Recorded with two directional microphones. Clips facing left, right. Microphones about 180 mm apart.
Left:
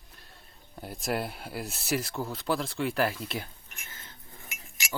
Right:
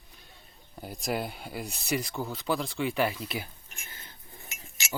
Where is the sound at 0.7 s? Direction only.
Centre (ahead or behind).